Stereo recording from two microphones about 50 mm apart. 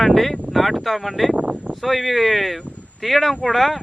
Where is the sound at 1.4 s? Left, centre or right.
Right.